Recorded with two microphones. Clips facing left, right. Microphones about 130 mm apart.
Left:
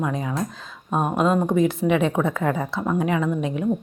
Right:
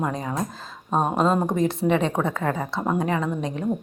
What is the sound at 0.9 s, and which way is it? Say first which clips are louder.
Speech: even; 30° right (ahead or behind).